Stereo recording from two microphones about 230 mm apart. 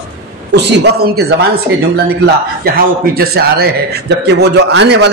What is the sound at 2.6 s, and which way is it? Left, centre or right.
A man's voice, right.